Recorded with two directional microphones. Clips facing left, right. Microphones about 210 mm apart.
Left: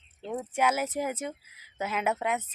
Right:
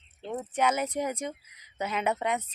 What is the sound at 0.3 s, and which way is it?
Speech, 5° left (ahead or behind).